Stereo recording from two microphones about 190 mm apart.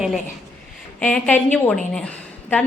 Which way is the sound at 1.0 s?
5° left (ahead or behind).